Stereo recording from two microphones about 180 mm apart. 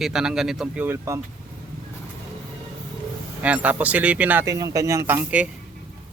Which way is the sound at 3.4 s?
10° right (ahead or behind).